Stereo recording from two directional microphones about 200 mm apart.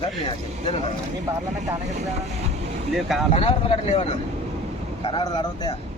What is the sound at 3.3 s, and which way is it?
Speech, 30° left (ahead or behind).